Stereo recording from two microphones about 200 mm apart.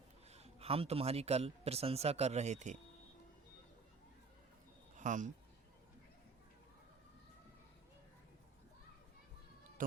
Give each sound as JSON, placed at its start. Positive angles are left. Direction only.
{"t": 0.3, "sound": "a man's voice", "side_deg": -30}
{"t": 4.9, "sound": "speech", "side_deg": -40}